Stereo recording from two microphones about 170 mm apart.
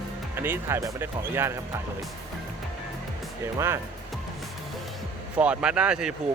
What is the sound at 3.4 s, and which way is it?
Speech, 15° right (ahead or behind).